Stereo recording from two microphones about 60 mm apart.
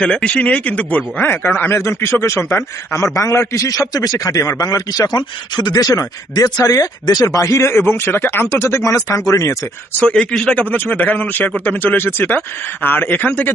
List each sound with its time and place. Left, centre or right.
0.0 s a man's voice: centre; by 9.0 s left
9.0 s speech: left
10.0 s a man's voice: centre; by 13.5 s left